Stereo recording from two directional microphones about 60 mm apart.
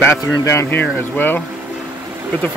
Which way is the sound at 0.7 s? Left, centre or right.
Left.